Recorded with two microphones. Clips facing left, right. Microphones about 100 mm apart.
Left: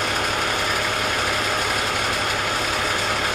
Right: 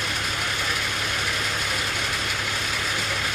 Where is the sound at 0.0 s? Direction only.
55° left (ahead or behind).